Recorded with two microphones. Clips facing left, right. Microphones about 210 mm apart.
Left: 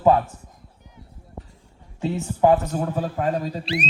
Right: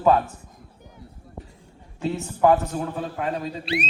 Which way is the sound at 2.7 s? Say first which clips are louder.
Left 3 dB; 45° left (ahead or behind).